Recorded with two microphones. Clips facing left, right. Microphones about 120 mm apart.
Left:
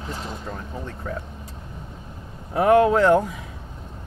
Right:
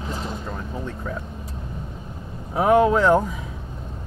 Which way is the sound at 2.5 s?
80° left.